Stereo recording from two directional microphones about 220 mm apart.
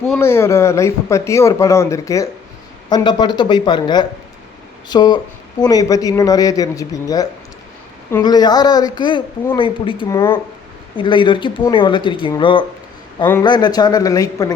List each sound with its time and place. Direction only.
0.0 s speech: 10° left (ahead or behind)